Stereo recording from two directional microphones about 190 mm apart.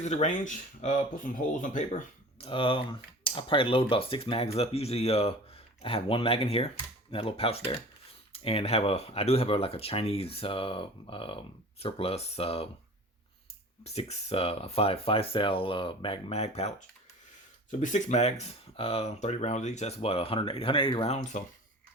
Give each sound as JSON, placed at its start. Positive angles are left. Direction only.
{"t": 0.0, "sound": "speech", "side_deg": 40}
{"t": 13.8, "sound": "speech", "side_deg": 35}